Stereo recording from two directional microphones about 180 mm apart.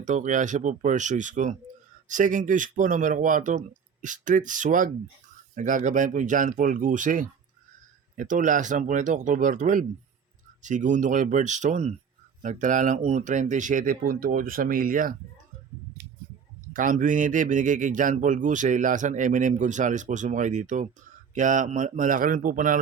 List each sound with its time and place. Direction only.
0.0 s speech: 45° right (ahead or behind)
16.7 s speech: 45° right (ahead or behind)